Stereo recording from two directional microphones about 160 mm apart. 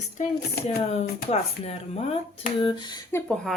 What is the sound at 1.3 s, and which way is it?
Speech, 40° left (ahead or behind).